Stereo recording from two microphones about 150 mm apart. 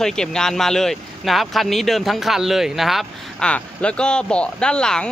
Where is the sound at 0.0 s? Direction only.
5° left (ahead or behind).